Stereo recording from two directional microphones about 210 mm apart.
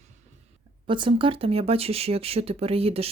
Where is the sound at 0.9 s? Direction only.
25° right (ahead or behind).